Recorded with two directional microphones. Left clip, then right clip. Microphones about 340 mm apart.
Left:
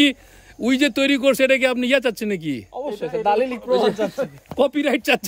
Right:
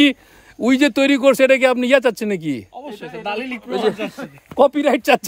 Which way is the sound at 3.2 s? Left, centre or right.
Centre.